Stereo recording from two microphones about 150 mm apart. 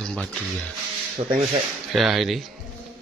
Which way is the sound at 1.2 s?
50° right (ahead or behind).